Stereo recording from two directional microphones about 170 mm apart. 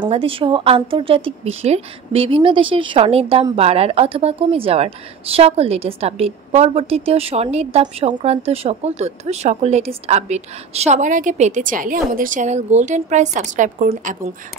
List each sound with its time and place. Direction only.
0.0 s speech: 30° right (ahead or behind); by 14.3 s 50° right (ahead or behind)